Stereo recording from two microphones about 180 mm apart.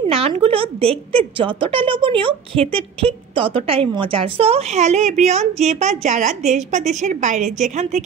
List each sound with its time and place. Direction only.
0.1 s a woman's voice: 30° right (ahead or behind)